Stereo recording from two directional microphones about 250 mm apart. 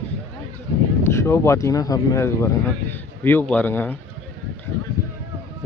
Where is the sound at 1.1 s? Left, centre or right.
Centre.